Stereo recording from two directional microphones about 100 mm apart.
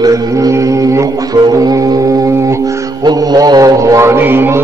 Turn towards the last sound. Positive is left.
turn(degrees=-20)  # may be behind; listen again after turning